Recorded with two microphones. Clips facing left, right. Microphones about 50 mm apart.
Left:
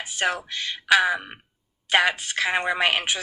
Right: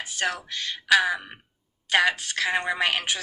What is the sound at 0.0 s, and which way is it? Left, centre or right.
A woman's voice, left.